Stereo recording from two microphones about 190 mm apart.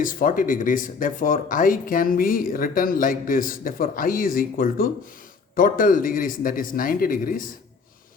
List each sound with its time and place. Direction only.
0.0 s speech: 45° left (ahead or behind)